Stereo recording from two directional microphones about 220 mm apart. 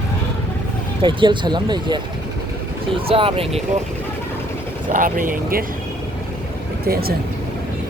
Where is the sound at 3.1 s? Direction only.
25° right (ahead or behind).